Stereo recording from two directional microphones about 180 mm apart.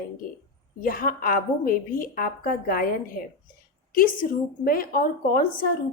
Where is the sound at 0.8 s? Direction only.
50° left (ahead or behind).